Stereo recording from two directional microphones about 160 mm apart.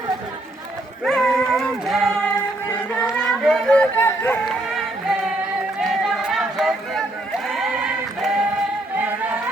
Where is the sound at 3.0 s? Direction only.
Centre (ahead or behind).